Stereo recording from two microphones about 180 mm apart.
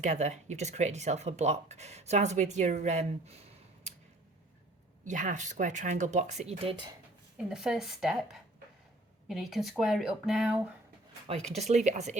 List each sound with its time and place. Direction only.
0.0 s speech: 40° right (ahead or behind)
5.0 s speech: 45° right (ahead or behind); by 6.9 s 30° right (ahead or behind)
7.3 s speech: 5° right (ahead or behind)
11.3 s speech: 30° right (ahead or behind)